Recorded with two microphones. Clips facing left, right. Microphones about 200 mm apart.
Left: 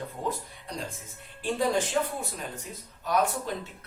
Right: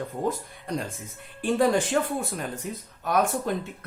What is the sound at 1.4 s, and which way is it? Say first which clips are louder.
Speech: right 5 dB; 55° right (ahead or behind).